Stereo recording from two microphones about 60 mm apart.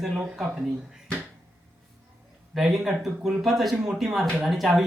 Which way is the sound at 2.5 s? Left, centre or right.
Centre.